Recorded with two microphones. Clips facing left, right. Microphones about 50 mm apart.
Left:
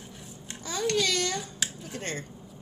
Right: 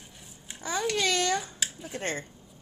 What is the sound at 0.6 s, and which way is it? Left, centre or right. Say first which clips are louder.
A child's voice: even; right.